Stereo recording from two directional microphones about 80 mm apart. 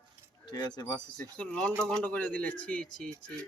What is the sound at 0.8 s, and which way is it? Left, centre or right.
Speech, left.